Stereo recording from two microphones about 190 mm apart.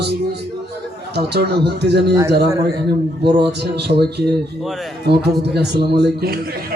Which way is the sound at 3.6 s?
60° right (ahead or behind).